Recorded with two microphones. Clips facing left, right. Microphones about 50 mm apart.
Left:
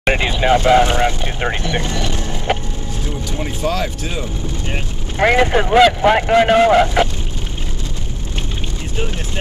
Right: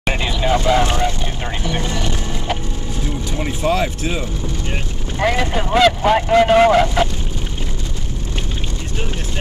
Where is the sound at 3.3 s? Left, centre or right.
Centre.